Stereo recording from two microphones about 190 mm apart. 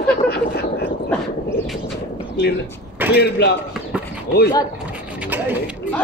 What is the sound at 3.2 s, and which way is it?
Speech, 60° left (ahead or behind).